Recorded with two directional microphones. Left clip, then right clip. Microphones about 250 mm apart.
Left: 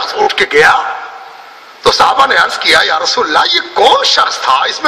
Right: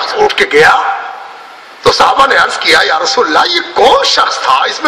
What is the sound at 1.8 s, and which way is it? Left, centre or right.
A man's voice, left.